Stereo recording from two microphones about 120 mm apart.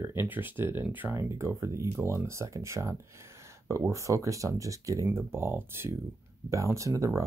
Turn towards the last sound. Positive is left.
turn(degrees=-25)  # may be behind; listen again after turning